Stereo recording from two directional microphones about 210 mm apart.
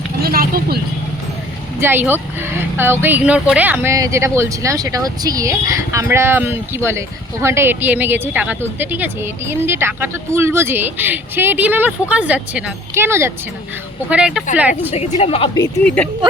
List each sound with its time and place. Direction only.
0.2 s vehicle: 45° right (ahead or behind)
1.8 s speech: 10° right (ahead or behind)
14.9 s a woman's voice: 30° left (ahead or behind)
15.8 s speech: 5° left (ahead or behind)